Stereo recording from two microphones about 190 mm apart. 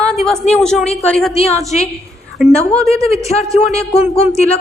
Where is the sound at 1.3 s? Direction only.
35° left (ahead or behind).